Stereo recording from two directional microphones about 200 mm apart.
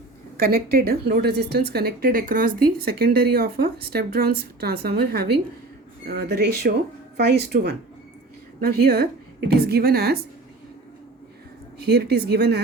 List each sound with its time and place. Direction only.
0.3 s speech: 50° right (ahead or behind)
11.8 s speech: 55° right (ahead or behind)